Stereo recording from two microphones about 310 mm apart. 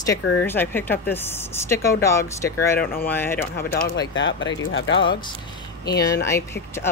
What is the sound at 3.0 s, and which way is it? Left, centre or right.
Speech, centre.